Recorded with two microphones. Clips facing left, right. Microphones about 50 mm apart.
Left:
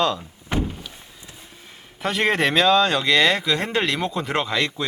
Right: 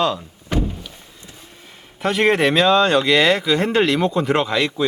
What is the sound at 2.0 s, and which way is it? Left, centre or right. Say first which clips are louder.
Speech: right 4 dB; centre.